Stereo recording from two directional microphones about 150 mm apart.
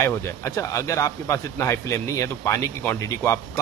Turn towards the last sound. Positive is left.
turn(degrees=20)  # may be behind; listen again after turning